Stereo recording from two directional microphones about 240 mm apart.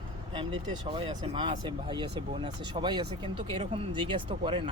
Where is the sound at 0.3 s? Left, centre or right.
Right.